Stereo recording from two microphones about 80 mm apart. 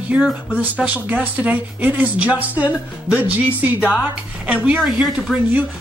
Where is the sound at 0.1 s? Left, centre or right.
Centre.